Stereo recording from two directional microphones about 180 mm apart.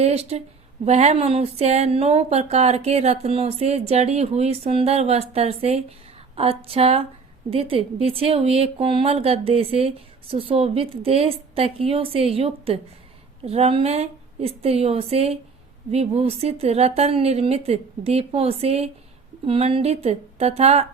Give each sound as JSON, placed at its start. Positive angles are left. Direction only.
{"t": 0.0, "sound": "speech", "side_deg": -35}